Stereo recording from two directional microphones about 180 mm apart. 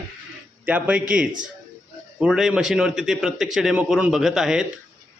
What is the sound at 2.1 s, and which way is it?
A man's voice, centre (ahead or behind).